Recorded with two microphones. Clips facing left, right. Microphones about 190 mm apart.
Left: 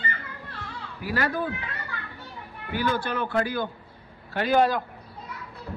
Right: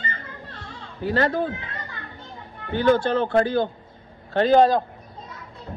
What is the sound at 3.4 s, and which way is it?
A man's voice, 25° right (ahead or behind).